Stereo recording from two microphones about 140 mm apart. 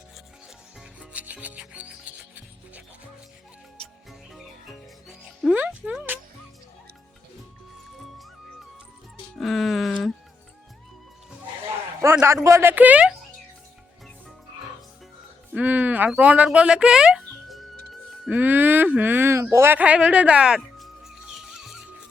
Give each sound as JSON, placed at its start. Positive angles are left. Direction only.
{"t": 0.8, "sound": "rub", "side_deg": -10}
{"t": 3.8, "sound": "music", "side_deg": 0}
{"t": 9.3, "sound": "music", "side_deg": 0}
{"t": 12.2, "sound": "a woman's voice", "side_deg": -20}
{"t": 15.5, "sound": "a sound", "side_deg": -10}